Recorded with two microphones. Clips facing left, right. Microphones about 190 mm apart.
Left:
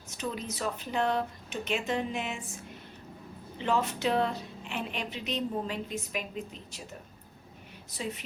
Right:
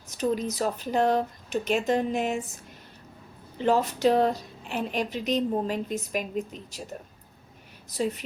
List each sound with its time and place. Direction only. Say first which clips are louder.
0.2 s a woman's voice: right 8 dB; 40° right (ahead or behind)
3.6 s a woman's voice: right 6 dB; 40° right (ahead or behind)
7.9 s a woman's voice: right 8 dB; 40° right (ahead or behind)